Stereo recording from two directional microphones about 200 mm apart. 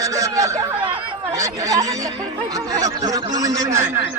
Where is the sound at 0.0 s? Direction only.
15° right (ahead or behind).